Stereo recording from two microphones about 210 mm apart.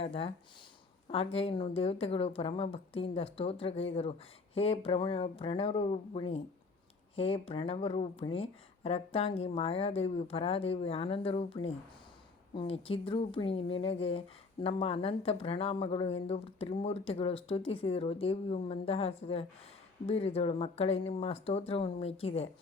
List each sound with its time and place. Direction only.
0.0 s speech: 25° left (ahead or behind)